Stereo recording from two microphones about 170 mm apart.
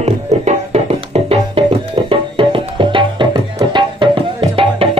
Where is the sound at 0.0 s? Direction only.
40° right (ahead or behind).